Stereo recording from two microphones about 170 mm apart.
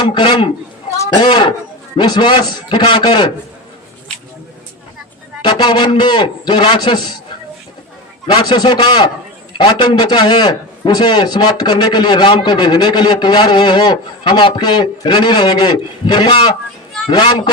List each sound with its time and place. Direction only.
0.1 s a man's voice: 30° left (ahead or behind)
5.4 s a man's voice: 30° left (ahead or behind)
8.3 s a man's voice: 25° left (ahead or behind)